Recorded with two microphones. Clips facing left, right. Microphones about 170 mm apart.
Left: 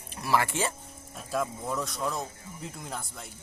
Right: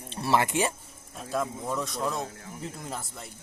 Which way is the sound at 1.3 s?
Centre (ahead or behind).